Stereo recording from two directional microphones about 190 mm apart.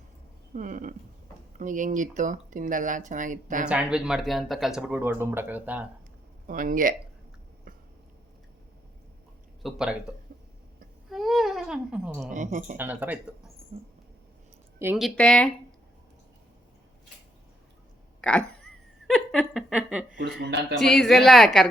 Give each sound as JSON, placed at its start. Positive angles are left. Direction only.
{"t": 0.5, "sound": "speech", "side_deg": -45}
{"t": 3.7, "sound": "speech", "side_deg": -5}
{"t": 6.5, "sound": "speech", "side_deg": -45}
{"t": 9.6, "sound": "speech", "side_deg": -5}
{"t": 11.1, "sound": "a sound", "side_deg": 0}
{"t": 12.3, "sound": "a woman's voice", "side_deg": -40}
{"t": 12.7, "sound": "speech", "side_deg": -10}
{"t": 13.7, "sound": "mouse", "side_deg": -30}
{"t": 14.9, "sound": "speech", "side_deg": 0}
{"t": 18.2, "sound": "a sound", "side_deg": 5}
{"t": 20.7, "sound": "speech", "side_deg": 0}